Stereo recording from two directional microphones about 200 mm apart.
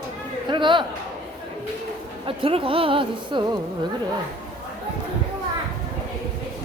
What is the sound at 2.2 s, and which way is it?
A woman's voice, 25° right (ahead or behind).